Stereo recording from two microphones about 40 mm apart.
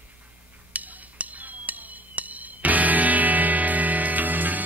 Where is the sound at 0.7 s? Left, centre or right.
Right.